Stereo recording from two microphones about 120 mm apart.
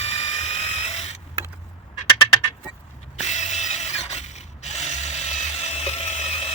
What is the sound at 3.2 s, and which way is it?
Mechanisms, 75° left (ahead or behind).